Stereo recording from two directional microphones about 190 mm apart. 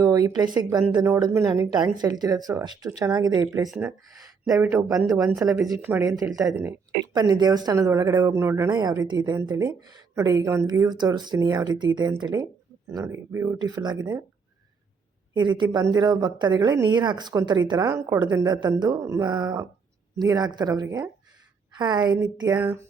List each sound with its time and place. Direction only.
0.0 s speech: 20° right (ahead or behind)
3.7 s speech: 5° right (ahead or behind)
15.4 s speech: 25° right (ahead or behind)